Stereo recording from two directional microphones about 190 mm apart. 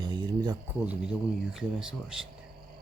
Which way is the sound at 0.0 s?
25° right (ahead or behind).